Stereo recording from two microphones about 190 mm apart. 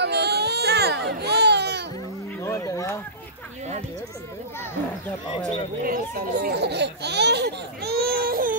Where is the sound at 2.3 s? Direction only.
15° left (ahead or behind).